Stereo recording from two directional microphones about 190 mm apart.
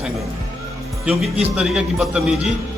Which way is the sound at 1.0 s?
5° right (ahead or behind).